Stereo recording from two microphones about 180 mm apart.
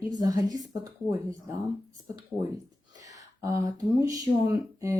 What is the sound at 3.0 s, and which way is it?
Speech, 20° right (ahead or behind).